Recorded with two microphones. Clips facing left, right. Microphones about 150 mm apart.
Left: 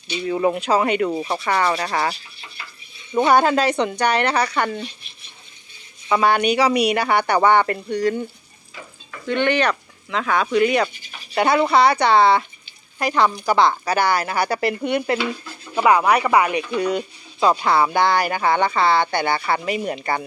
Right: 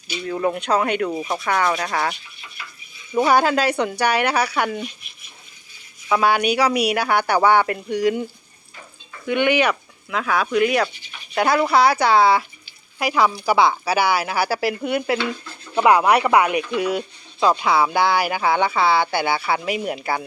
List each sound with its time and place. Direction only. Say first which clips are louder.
0.2 s speech: left 3 dB; 5° left (ahead or behind)
3.2 s speech: left 2 dB; centre (ahead or behind)
6.1 s speech: left 1 dB; 5° right (ahead or behind)
10.9 s dog: left 1 dB; 40° left (ahead or behind)
11.3 s speech: left 1 dB; centre (ahead or behind)